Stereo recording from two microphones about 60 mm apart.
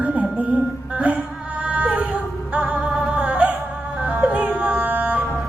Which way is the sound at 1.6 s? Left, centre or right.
Centre.